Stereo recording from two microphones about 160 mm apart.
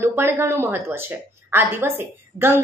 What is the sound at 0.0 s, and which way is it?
Speech, 15° right (ahead or behind).